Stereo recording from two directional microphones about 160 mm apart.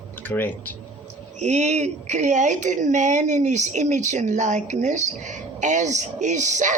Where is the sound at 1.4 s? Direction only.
45° right (ahead or behind).